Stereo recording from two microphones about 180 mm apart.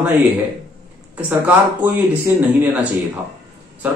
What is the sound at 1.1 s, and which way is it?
Speech, 10° right (ahead or behind).